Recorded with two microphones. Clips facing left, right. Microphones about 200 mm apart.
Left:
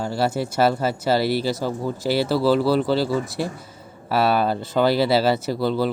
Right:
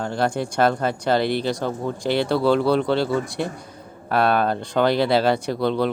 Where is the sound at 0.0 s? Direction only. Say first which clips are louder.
Even; 5° left (ahead or behind).